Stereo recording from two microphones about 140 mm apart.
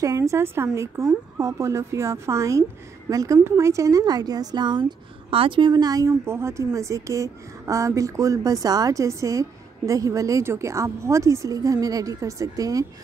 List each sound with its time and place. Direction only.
0.0 s a woman's voice: 25° right (ahead or behind)